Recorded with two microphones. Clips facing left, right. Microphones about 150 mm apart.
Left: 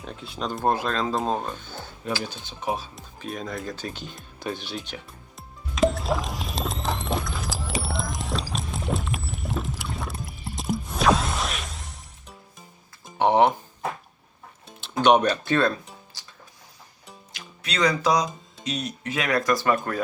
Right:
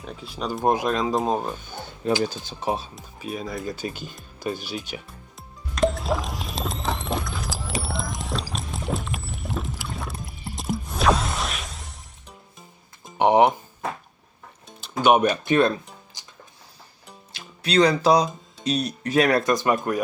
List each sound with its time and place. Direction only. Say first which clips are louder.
0.0 s speech: right 1 dB; centre (ahead or behind)
2.4 s speech: right 2 dB; 35° right (ahead or behind)
2.9 s speech: right 2 dB; 5° right (ahead or behind)
5.4 s music: even; centre (ahead or behind)
13.1 s a sound: right 2 dB; 15° right (ahead or behind)
14.8 s music: even; centre (ahead or behind); by 16.3 s 20° right (ahead or behind)
17.3 s speech: right 10 dB; 30° right (ahead or behind)
19.4 s speech: right 1 dB; 20° right (ahead or behind)